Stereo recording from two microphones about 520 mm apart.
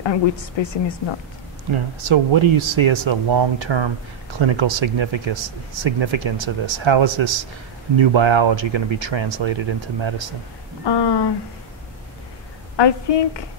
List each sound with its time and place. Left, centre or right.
0.0 s a woman's voice: left
1.7 s speech: right
10.9 s a woman's voice: left
12.7 s a woman's voice: left